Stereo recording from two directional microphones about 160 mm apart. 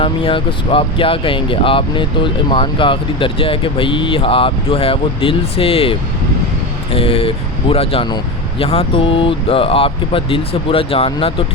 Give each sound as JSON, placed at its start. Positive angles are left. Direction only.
{"t": 0.0, "sound": "speech", "side_deg": 35}